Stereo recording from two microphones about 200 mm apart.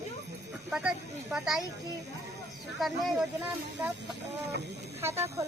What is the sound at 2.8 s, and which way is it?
Speech, centre (ahead or behind).